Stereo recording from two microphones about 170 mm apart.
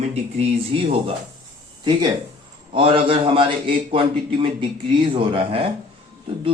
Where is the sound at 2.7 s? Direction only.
30° right (ahead or behind).